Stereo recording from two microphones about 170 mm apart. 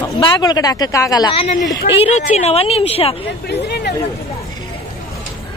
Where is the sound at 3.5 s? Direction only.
70° left (ahead or behind).